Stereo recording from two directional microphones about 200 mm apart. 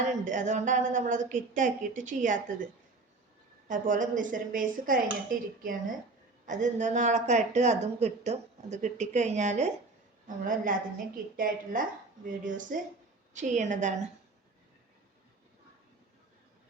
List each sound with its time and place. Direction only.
0.0 s speech: 40° right (ahead or behind)
3.7 s a woman's voice: 40° right (ahead or behind)